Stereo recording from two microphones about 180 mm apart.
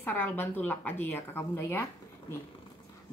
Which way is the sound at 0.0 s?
10° left (ahead or behind).